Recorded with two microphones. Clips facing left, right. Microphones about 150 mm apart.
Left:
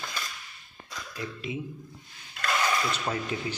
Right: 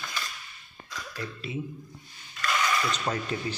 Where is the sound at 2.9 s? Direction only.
10° left (ahead or behind).